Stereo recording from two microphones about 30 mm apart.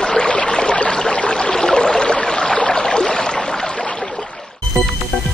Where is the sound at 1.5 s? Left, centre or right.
Centre.